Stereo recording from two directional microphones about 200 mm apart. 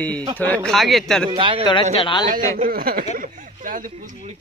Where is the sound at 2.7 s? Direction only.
45° right (ahead or behind).